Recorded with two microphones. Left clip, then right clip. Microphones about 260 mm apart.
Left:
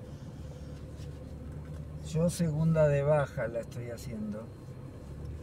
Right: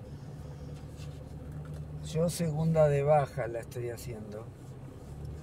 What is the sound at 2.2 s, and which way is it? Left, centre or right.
Speech, right.